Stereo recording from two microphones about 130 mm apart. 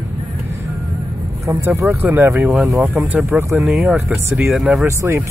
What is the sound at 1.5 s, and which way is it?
Speech, 20° right (ahead or behind).